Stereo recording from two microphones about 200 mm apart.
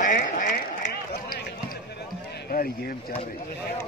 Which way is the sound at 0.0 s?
40° left (ahead or behind).